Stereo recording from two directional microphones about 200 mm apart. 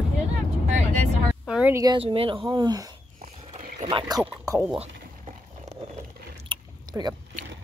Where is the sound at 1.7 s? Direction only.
25° right (ahead or behind).